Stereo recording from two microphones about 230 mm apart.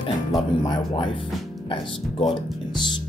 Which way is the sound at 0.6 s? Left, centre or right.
Centre.